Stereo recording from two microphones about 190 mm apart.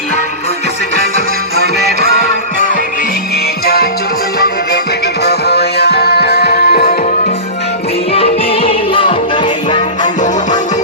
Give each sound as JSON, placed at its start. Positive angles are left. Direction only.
{"t": 5.2, "sound": "music", "side_deg": 60}
{"t": 8.1, "sound": "music", "side_deg": 30}